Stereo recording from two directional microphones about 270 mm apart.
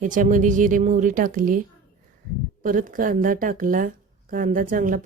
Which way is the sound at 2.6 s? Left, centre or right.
Right.